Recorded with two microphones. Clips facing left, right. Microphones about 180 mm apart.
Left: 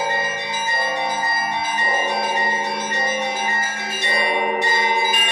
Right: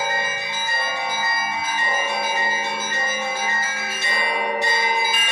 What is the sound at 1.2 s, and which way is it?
Change ringing, 35° left (ahead or behind).